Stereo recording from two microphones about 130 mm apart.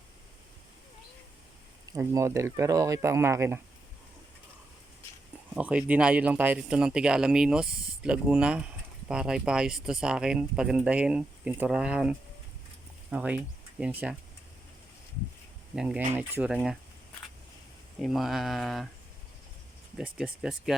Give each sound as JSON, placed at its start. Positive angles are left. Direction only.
{"t": 1.9, "sound": "speech", "side_deg": -25}
{"t": 5.5, "sound": "speech", "side_deg": -10}
{"t": 15.7, "sound": "speech", "side_deg": -5}
{"t": 18.0, "sound": "speech", "side_deg": 0}
{"t": 20.0, "sound": "speech", "side_deg": -5}